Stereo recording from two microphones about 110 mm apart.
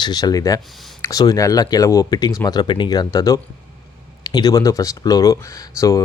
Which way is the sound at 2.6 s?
45° left (ahead or behind).